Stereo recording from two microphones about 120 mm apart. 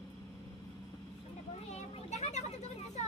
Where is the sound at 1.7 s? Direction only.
70° left (ahead or behind).